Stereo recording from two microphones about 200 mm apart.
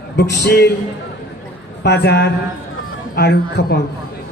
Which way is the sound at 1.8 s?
55° left (ahead or behind).